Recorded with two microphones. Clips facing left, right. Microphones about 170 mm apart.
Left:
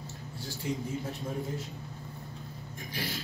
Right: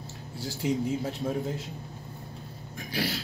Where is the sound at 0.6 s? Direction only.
90° right.